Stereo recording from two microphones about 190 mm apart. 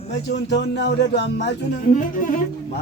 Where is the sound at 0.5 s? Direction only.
65° left (ahead or behind).